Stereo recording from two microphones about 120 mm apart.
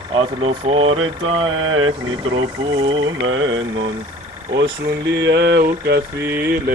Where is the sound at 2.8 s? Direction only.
45° right (ahead or behind).